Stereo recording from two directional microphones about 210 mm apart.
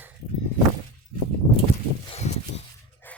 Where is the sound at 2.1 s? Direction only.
30° left (ahead or behind).